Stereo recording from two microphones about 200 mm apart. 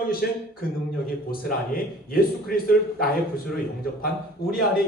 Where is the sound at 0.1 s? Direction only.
50° left (ahead or behind).